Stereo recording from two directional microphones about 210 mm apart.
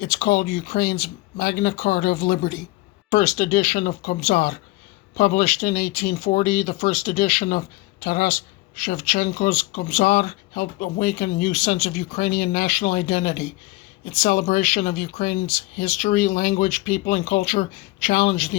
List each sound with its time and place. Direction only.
0.0 s speech: 45° left (ahead or behind)